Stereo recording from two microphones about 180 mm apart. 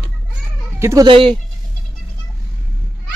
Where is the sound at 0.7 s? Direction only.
15° right (ahead or behind).